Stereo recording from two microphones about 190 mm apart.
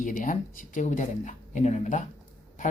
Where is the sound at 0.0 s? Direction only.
45° left (ahead or behind).